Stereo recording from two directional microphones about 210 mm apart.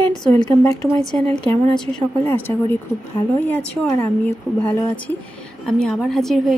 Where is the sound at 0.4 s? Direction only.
20° left (ahead or behind).